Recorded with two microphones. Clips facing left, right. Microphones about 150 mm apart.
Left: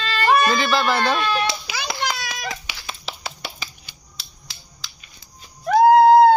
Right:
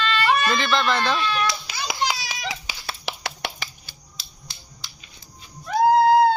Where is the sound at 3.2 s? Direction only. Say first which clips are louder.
Right 2 dB; 75° right (ahead or behind).